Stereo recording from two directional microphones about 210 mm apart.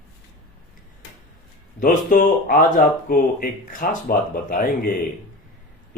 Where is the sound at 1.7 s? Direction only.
40° left (ahead or behind).